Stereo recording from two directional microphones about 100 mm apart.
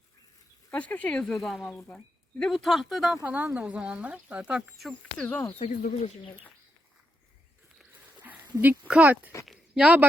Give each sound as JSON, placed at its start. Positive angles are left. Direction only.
{"t": 0.7, "sound": "speech", "side_deg": 15}
{"t": 1.7, "sound": "speech", "side_deg": 15}
{"t": 2.4, "sound": "speech", "side_deg": 5}
{"t": 3.2, "sound": "speech", "side_deg": -15}
{"t": 4.8, "sound": "speech", "side_deg": 5}
{"t": 5.5, "sound": "speech", "side_deg": 90}
{"t": 8.9, "sound": "speech", "side_deg": -15}